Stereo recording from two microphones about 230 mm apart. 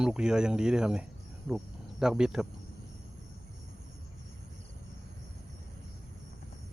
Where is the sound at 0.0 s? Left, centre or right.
Centre.